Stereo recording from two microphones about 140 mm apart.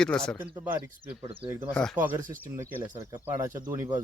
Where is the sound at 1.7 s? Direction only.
5° left (ahead or behind).